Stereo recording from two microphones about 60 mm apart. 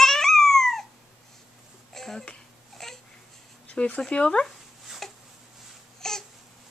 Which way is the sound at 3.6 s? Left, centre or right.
Left.